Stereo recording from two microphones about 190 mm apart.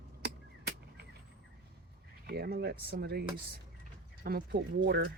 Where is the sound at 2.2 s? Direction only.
55° right (ahead or behind).